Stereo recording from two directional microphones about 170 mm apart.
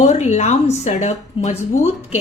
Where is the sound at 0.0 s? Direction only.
40° left (ahead or behind).